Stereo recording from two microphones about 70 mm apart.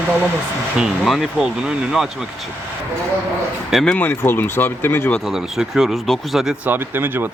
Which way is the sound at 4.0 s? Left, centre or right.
Left.